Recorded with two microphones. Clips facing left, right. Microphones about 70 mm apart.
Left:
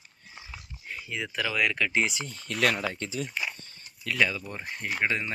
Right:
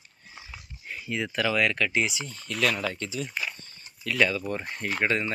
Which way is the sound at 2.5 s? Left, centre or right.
Left.